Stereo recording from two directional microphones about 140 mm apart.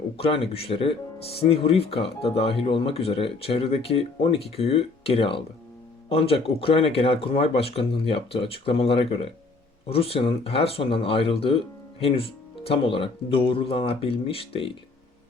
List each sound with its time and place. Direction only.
0.2 s speech: 45° left (ahead or behind)